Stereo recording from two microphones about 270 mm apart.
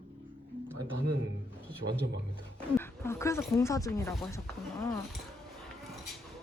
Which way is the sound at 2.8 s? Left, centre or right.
Centre.